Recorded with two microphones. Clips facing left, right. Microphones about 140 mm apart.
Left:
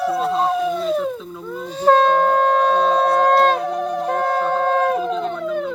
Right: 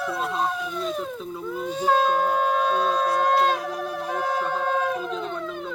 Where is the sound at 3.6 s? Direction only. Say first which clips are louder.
Left 7 dB; 5° right (ahead or behind).